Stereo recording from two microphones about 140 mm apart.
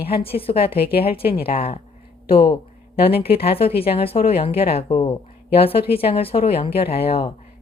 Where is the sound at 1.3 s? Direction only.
45° left (ahead or behind).